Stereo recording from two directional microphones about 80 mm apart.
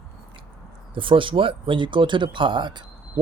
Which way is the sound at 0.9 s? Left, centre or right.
Right.